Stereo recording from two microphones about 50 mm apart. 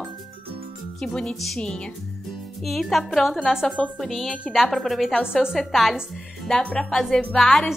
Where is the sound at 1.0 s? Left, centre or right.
Centre.